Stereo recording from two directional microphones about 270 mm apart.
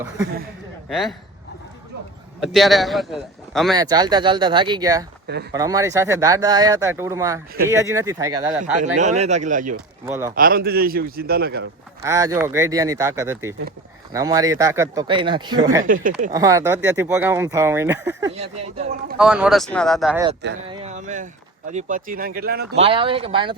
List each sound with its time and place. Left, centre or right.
0.9 s speech: centre
2.4 s a man's voice: centre
3.8 s speech: centre
8.6 s speech: right
10.1 s speech: centre
10.3 s a man's voice: right
12.0 s speech: centre
15.9 s speech: right
16.3 s speech: centre
18.3 s a man's voice: right
19.1 s a man's voice: centre
20.7 s a man's voice: right
22.8 s speech: centre